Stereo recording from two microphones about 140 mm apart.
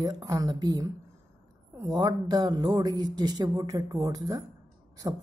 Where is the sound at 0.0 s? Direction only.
25° right (ahead or behind).